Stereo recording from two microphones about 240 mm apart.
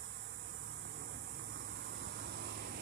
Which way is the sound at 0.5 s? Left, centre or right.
Right.